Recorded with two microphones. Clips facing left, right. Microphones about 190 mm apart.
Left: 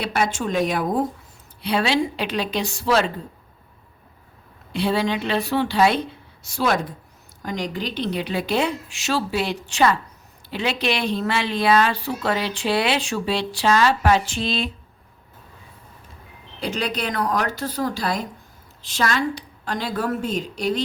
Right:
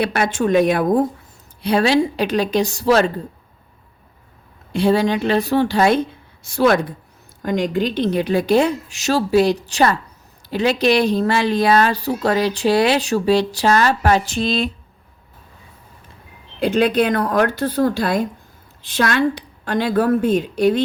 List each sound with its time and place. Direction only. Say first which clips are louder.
0.0 s a woman's voice: right 5 dB; 60° right (ahead or behind)
1.6 s a woman's voice: right 5 dB; 45° right (ahead or behind)
4.7 s a woman's voice: right 6 dB; 45° right (ahead or behind)
16.6 s a woman's voice: right 10 dB; 55° right (ahead or behind)